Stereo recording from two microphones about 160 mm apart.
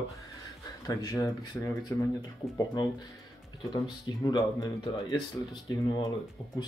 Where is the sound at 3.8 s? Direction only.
25° left (ahead or behind).